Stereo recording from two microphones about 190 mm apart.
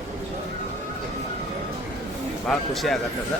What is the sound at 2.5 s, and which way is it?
Speech, centre (ahead or behind).